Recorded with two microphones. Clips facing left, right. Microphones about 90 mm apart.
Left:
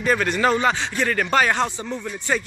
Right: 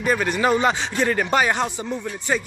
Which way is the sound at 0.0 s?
10° right (ahead or behind).